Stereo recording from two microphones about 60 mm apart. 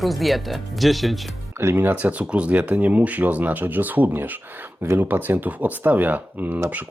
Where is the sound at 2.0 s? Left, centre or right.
Right.